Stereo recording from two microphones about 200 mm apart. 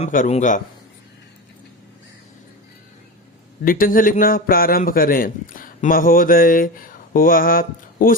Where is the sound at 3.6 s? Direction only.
45° left (ahead or behind).